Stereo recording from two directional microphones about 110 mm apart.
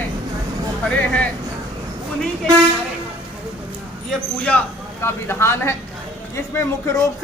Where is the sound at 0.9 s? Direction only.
10° left (ahead or behind).